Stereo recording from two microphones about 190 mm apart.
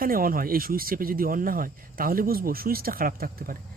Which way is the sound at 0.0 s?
50° right (ahead or behind).